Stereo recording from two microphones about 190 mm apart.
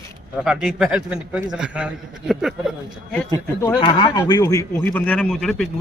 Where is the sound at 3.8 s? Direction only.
30° left (ahead or behind).